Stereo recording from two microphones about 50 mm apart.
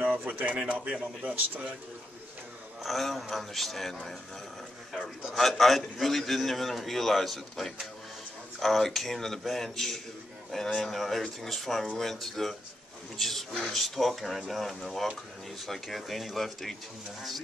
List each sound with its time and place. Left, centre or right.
0.2 s speech: right
1.2 s speech: right
2.8 s a man's voice: centre
5.3 s a man's voice: centre